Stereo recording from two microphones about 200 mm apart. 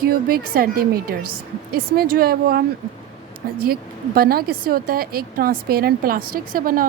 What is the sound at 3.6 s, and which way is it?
Speech, 50° right (ahead or behind).